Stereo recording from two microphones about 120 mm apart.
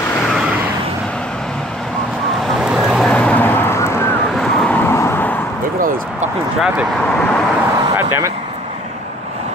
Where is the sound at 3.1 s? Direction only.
10° left (ahead or behind).